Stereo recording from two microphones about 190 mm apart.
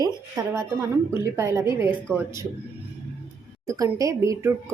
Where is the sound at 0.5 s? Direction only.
15° right (ahead or behind).